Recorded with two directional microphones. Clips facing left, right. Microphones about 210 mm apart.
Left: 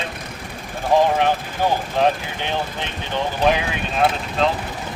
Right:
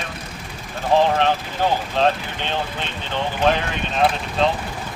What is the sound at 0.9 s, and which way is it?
Speech, 15° left (ahead or behind).